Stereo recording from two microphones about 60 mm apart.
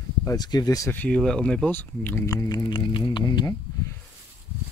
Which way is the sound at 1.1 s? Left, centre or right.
Centre.